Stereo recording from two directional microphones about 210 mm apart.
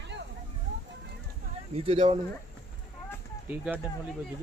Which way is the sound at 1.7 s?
25° right (ahead or behind).